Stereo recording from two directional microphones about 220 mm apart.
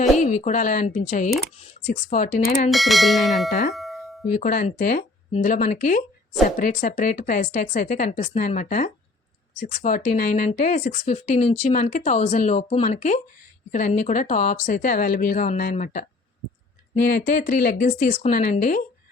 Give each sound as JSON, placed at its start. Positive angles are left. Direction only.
{"t": 0.2, "sound": "speech", "side_deg": 35}
{"t": 2.6, "sound": "bell", "side_deg": 0}
{"t": 3.5, "sound": "speech", "side_deg": 40}
{"t": 3.8, "sound": "doorbell", "side_deg": 0}
{"t": 4.4, "sound": "speech", "side_deg": 35}
{"t": 17.1, "sound": "speech", "side_deg": 40}